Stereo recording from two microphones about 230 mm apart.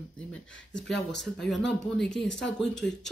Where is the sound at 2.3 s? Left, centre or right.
Left.